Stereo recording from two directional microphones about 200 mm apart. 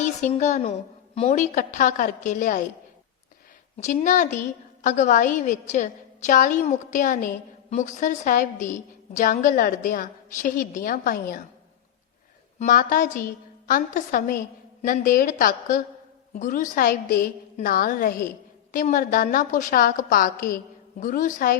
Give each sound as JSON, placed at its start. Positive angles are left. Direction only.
{"t": 0.0, "sound": "a woman's voice", "side_deg": 35}
{"t": 3.8, "sound": "a woman's voice", "side_deg": 35}
{"t": 12.5, "sound": "a woman's voice", "side_deg": 45}